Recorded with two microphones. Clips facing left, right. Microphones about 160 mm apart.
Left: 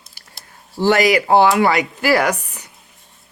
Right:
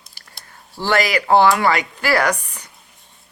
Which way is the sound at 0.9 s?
10° left (ahead or behind).